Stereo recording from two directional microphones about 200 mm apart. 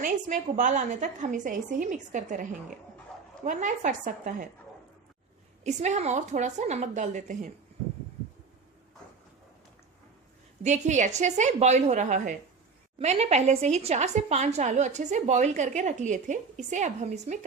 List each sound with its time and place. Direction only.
0.0 s a woman's voice: 40° right (ahead or behind)
5.6 s a woman's voice: 35° right (ahead or behind)
10.6 s a woman's voice: 35° right (ahead or behind)